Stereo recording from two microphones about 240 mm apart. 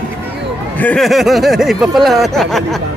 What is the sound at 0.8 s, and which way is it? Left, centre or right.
Speech, centre.